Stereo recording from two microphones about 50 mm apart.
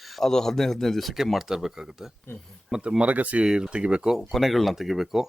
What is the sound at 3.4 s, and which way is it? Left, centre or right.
Speech, centre.